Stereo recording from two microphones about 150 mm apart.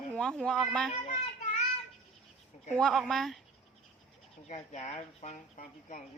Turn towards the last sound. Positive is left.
turn(degrees=55)  # may be behind; listen again after turning